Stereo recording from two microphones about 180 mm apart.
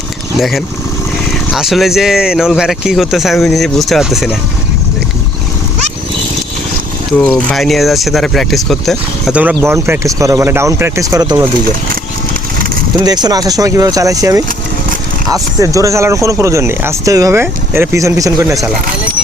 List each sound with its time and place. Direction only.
0.3 s speech: centre (ahead or behind)
7.2 s speech: 5° left (ahead or behind); by 11.4 s 20° right (ahead or behind)
13.0 s speech: 20° right (ahead or behind)